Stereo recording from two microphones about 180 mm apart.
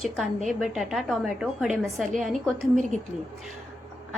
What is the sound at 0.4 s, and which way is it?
A woman's voice, centre (ahead or behind).